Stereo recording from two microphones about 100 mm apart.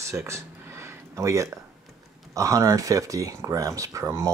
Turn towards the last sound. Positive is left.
turn(degrees=-30)  # may be behind; listen again after turning